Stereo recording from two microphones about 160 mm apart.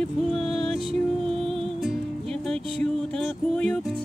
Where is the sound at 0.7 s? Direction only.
40° right (ahead or behind).